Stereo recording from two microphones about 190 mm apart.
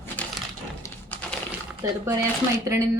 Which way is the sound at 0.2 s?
5° left (ahead or behind).